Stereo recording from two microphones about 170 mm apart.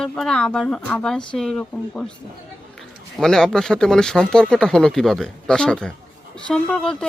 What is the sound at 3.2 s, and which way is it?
Speech, 5° left (ahead or behind).